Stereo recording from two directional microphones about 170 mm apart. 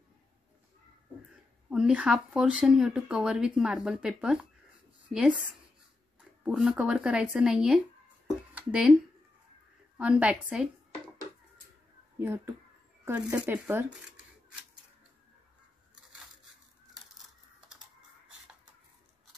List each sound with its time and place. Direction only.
1.7 s speech: 5° right (ahead or behind)
6.4 s speech: 5° right (ahead or behind)
9.9 s a woman's voice: 5° right (ahead or behind)
12.2 s a woman's voice: 15° right (ahead or behind)
15.9 s a sound: 5° right (ahead or behind)